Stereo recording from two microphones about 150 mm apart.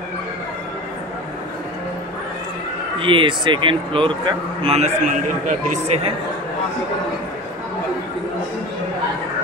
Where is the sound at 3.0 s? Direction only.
35° right (ahead or behind); by 5.9 s 55° right (ahead or behind).